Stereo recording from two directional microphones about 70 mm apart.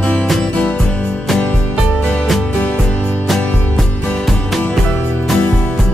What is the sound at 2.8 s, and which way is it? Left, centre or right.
Music, centre.